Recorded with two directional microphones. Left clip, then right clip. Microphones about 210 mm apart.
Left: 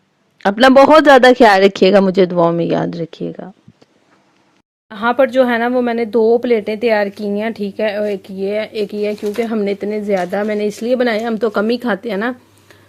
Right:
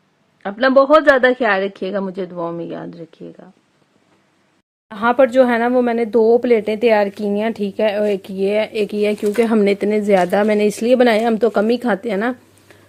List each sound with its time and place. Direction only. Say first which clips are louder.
0.3 s speech: left 5 dB; 45° left (ahead or behind)
4.9 s speech: even; centre (ahead or behind)